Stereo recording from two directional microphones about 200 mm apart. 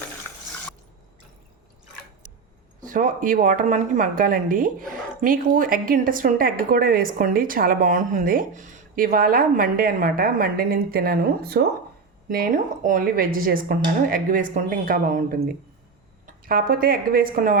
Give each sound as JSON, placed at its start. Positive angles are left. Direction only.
{"t": 2.8, "sound": "a woman's voice", "side_deg": -40}